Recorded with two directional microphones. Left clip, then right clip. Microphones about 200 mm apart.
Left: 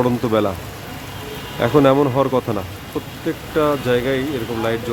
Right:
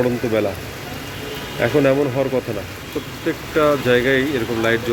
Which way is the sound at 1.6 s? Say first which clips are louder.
Left 2 dB; 25° left (ahead or behind).